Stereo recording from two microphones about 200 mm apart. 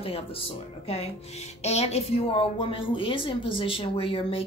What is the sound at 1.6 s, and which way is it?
A woman's voice, 30° left (ahead or behind).